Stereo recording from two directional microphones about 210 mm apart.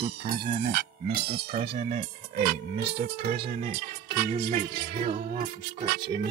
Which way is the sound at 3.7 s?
50° right (ahead or behind).